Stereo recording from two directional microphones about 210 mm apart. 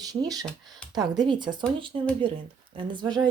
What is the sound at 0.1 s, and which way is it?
Speech, 15° right (ahead or behind).